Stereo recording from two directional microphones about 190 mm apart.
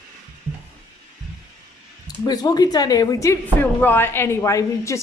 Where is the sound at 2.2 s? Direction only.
20° left (ahead or behind).